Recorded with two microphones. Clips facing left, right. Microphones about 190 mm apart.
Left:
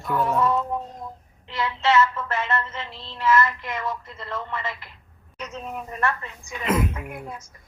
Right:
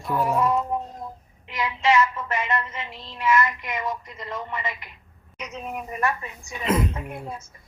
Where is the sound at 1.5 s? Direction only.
15° right (ahead or behind).